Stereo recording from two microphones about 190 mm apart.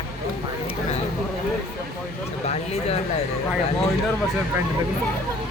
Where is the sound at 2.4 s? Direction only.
35° left (ahead or behind).